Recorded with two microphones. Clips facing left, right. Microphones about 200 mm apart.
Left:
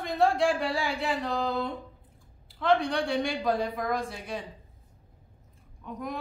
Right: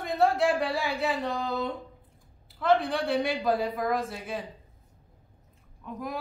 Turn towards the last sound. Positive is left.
turn(degrees=-5)  # may be behind; listen again after turning